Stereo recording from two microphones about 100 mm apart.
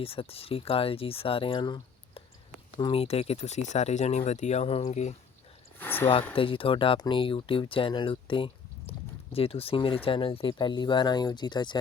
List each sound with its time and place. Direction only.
0.0 s speech: 70° left (ahead or behind); by 1.8 s 50° left (ahead or behind)
2.7 s speech: 60° left (ahead or behind); by 5.1 s 90° left
5.8 s speech: 20° left (ahead or behind)
6.3 s speech: 60° left (ahead or behind)
10.6 s speech: 50° left (ahead or behind)